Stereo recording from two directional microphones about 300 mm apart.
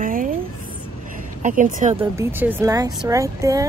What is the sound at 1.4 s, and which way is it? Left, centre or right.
Speech, right.